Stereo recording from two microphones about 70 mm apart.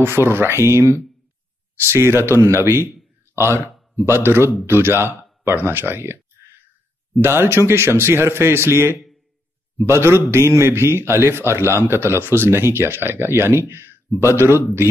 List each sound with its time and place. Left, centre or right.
0.0 s a man's voice: right
7.2 s a man's voice: right